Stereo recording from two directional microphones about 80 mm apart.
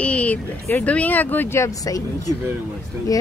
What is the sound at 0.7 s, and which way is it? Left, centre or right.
Speech, centre.